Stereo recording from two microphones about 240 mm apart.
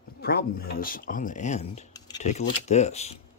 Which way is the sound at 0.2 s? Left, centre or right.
Left.